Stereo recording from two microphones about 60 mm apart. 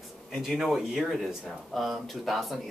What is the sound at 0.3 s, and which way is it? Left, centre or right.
Speech, centre.